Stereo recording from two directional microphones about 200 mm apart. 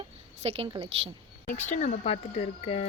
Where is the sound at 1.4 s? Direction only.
10° left (ahead or behind).